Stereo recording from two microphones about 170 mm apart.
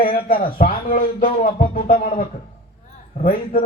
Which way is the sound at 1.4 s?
55° left (ahead or behind).